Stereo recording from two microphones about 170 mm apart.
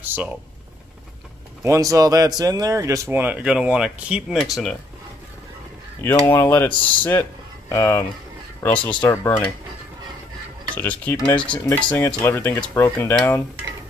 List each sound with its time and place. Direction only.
0.0 s a sound: 10° right (ahead or behind)
1.6 s speech: 20° right (ahead or behind)
5.9 s speech: 15° left (ahead or behind)
10.7 s speech: 10° left (ahead or behind)